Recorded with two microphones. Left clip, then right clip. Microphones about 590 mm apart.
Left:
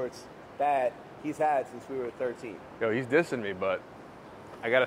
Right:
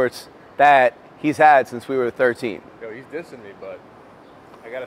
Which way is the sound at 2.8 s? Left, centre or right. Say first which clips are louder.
Left 8 dB; left.